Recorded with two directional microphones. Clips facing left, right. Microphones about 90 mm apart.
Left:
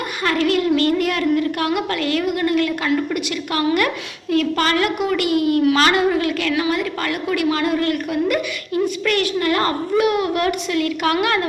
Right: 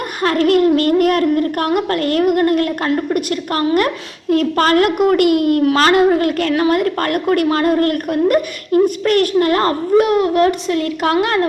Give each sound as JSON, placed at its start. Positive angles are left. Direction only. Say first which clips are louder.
{"t": 0.2, "sound": "a child's voice", "louder": "right 6 dB", "side_deg": -45}